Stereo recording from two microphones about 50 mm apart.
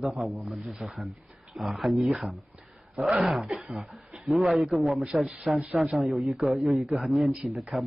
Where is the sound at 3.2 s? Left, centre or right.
Centre.